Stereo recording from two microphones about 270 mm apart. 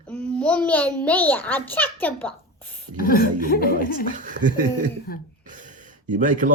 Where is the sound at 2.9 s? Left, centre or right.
Left.